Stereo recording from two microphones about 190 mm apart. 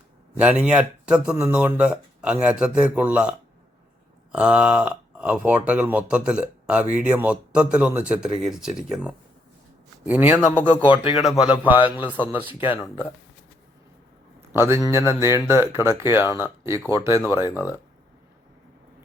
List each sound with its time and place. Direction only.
0.3 s a man's voice: 5° right (ahead or behind)
14.5 s a man's voice: 15° right (ahead or behind)
17.4 s speech: 20° left (ahead or behind)